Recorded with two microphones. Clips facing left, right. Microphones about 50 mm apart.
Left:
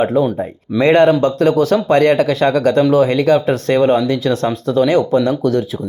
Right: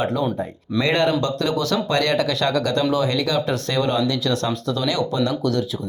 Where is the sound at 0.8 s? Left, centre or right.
Left.